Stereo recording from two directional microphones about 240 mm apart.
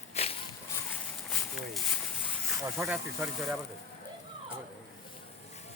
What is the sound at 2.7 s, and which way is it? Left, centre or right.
Speech, centre.